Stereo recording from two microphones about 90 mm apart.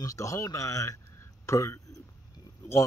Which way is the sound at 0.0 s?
35° left (ahead or behind).